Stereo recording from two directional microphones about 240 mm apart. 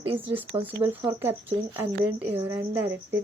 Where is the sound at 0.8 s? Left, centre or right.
Centre.